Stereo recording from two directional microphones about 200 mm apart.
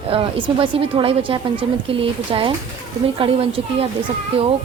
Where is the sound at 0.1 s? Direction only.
25° right (ahead or behind).